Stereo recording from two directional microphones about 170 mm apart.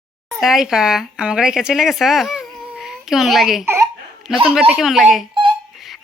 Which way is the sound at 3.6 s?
15° right (ahead or behind).